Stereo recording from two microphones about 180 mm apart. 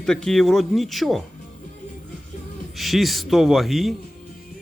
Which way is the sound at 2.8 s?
Centre (ahead or behind).